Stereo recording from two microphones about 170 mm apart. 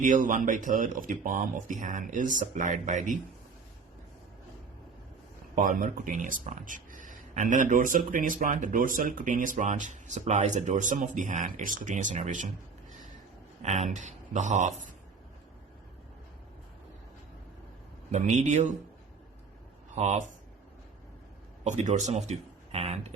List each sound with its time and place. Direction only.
0.0 s speech: 50° right (ahead or behind)
5.5 s speech: 50° right (ahead or behind)
13.6 s speech: 40° right (ahead or behind)
18.1 s speech: 45° right (ahead or behind)
20.0 s speech: 45° right (ahead or behind)
21.6 s speech: 40° right (ahead or behind)